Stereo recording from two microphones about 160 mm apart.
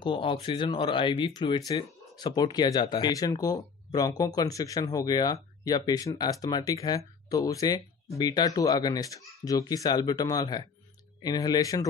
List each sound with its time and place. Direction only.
0.0 s speech: 30° left (ahead or behind)